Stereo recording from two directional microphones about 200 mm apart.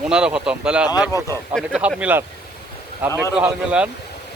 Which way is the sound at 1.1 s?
15° left (ahead or behind).